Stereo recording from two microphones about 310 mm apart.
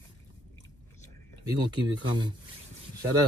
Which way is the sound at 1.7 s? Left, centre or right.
Centre.